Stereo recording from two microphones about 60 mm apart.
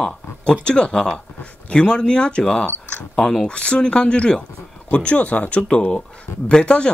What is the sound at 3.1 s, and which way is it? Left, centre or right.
Speech, centre.